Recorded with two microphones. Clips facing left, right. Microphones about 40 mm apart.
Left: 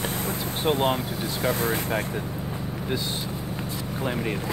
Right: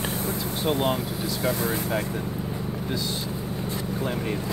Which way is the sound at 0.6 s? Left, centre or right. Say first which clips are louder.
Left 2 dB; left.